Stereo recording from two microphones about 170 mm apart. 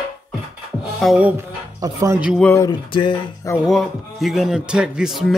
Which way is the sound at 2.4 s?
15° left (ahead or behind).